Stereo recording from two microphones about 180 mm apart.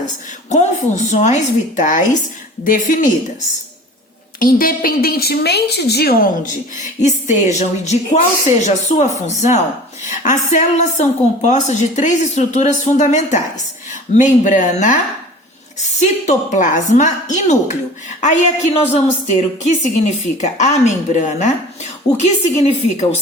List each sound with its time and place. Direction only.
0.5 s a woman's voice: 40° left (ahead or behind)
4.4 s a woman's voice: 50° left (ahead or behind)